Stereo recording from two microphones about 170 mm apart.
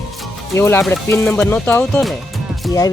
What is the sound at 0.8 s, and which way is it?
Music, centre (ahead or behind).